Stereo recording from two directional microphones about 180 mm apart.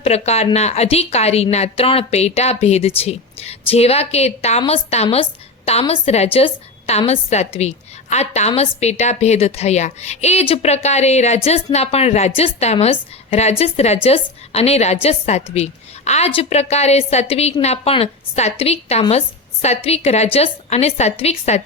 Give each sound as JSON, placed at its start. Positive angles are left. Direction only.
{"t": 0.0, "sound": "a woman's voice", "side_deg": 35}